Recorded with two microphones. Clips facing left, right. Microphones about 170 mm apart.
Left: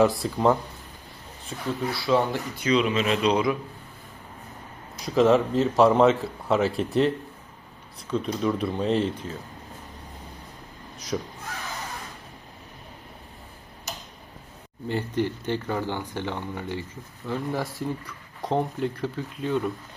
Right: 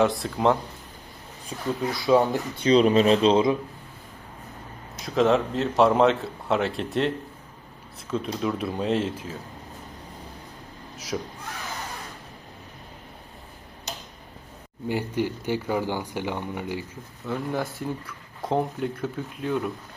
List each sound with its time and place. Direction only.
0.0 s speech: centre (ahead or behind)
1.5 s speech: 15° right (ahead or behind)
2.6 s speech: 35° right (ahead or behind)
5.0 s speech: centre (ahead or behind)
8.1 s speech: centre (ahead or behind)
10.9 s speech: 5° right (ahead or behind)
14.8 s speech: 10° right (ahead or behind)
17.2 s speech: centre (ahead or behind)